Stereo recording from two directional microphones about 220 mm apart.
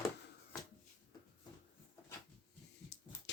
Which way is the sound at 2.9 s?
50° left (ahead or behind).